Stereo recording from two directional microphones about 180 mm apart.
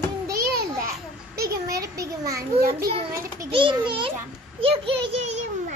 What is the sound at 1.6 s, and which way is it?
Speech, 20° right (ahead or behind).